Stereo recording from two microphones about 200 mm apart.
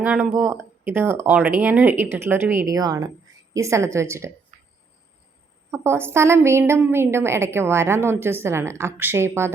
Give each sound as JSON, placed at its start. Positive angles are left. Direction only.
{"t": 0.0, "sound": "a woman's voice", "side_deg": -5}
{"t": 4.5, "sound": "a sound", "side_deg": -40}
{"t": 5.7, "sound": "a woman's voice", "side_deg": -10}